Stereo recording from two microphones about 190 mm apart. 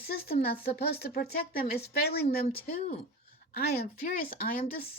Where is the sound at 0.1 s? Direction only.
55° left (ahead or behind).